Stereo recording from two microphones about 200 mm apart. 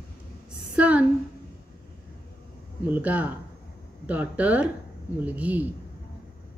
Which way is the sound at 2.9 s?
10° right (ahead or behind).